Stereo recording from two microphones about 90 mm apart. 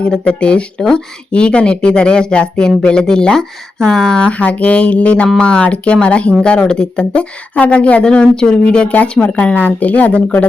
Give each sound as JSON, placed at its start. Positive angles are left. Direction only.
{"t": 0.0, "sound": "speech", "side_deg": 10}